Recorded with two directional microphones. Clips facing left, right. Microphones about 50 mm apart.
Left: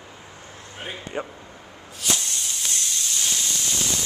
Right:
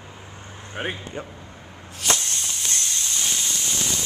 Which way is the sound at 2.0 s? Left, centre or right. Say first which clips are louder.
Right 2 dB; right.